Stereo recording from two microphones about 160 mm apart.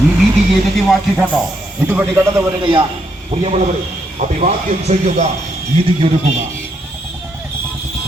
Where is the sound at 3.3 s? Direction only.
40° right (ahead or behind).